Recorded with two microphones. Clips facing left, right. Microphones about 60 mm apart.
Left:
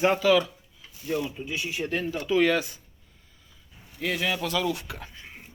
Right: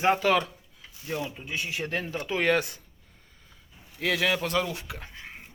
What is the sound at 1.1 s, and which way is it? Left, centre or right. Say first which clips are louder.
Speech: left 3 dB; right.